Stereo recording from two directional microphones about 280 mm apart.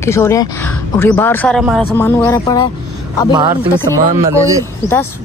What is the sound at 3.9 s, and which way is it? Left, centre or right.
Speech, centre.